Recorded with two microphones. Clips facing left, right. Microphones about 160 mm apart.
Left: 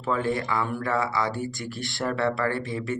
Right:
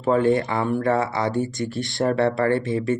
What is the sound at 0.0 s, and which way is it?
Speech, 45° right (ahead or behind).